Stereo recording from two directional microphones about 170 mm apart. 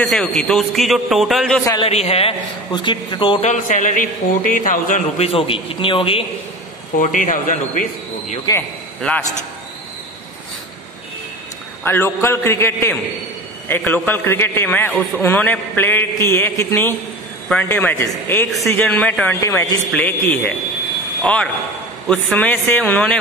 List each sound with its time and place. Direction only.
0.0 s a man's voice: centre (ahead or behind)
1.8 s a man's voice: 40° left (ahead or behind)
3.4 s a man's voice: 50° left (ahead or behind)
5.1 s a man's voice: 35° left (ahead or behind)
7.0 s a man's voice: 50° left (ahead or behind)
8.5 s a man's voice: 25° left (ahead or behind)
11.8 s a man's voice: 15° left (ahead or behind)
14.9 s a man's voice: centre (ahead or behind)